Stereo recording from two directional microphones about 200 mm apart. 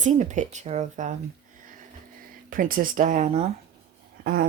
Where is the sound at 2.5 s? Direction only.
45° right (ahead or behind).